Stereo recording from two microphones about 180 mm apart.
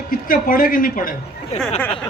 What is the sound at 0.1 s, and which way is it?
A man's voice, 50° left (ahead or behind).